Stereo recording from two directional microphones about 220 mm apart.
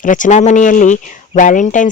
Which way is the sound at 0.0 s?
35° left (ahead or behind).